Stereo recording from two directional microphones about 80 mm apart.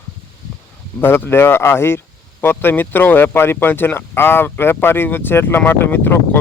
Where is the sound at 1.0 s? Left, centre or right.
Left.